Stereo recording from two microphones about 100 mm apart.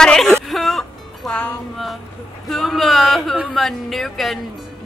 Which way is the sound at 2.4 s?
Centre (ahead or behind).